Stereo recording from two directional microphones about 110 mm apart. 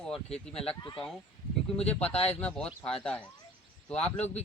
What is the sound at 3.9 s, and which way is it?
Speech, 85° left.